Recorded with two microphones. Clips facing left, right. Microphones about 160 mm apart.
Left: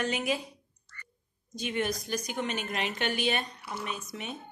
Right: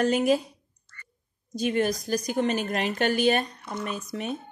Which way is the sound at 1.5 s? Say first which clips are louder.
Right 7 dB; 40° right (ahead or behind).